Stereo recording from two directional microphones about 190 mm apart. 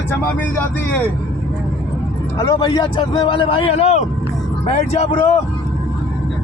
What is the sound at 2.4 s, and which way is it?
A man's voice, 20° left (ahead or behind).